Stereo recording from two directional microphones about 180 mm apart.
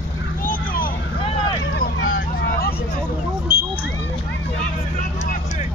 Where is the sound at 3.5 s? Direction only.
20° left (ahead or behind).